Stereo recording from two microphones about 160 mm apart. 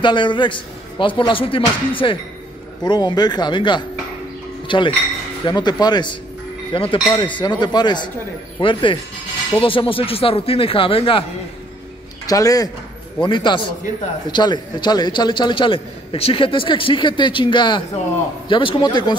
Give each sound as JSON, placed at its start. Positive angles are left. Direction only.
{"t": 0.0, "sound": "a man's voice", "side_deg": 30}
{"t": 12.3, "sound": "a man's voice", "side_deg": 20}